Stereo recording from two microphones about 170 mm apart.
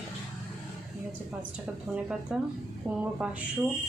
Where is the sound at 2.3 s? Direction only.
5° right (ahead or behind).